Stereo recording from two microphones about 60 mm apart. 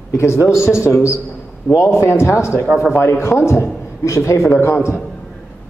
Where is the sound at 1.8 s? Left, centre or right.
Left.